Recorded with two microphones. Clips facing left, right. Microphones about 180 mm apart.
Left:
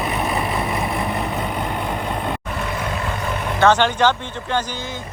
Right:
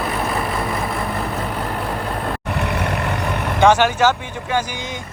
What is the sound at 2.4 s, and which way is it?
Vehicle, 70° right (ahead or behind).